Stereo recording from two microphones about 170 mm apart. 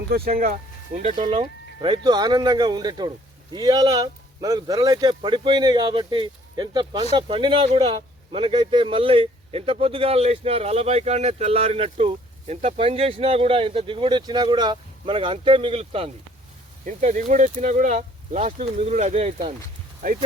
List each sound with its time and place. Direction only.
0.1 s speech: 55° right (ahead or behind)
1.3 s speech: 30° right (ahead or behind)
16.8 s speech: 45° right (ahead or behind)